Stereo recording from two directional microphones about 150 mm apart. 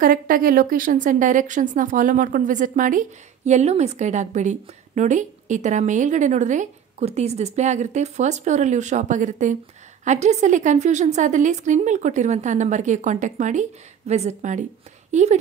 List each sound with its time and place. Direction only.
0.0 s a woman's voice: 70° right (ahead or behind); by 15.3 s 50° right (ahead or behind)